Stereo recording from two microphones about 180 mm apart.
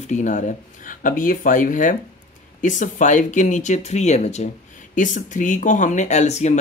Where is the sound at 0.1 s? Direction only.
40° left (ahead or behind).